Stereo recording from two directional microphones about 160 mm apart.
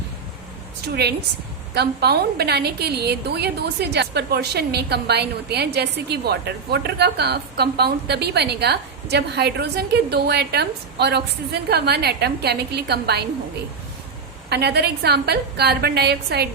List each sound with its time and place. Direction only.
1.7 s a woman's voice: 90° right
14.5 s a woman's voice: 90° right